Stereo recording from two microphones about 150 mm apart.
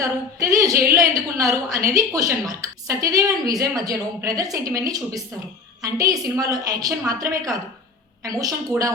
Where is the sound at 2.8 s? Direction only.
25° right (ahead or behind).